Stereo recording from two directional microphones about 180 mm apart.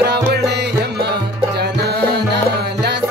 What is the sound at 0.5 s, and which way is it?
Music, 65° right (ahead or behind).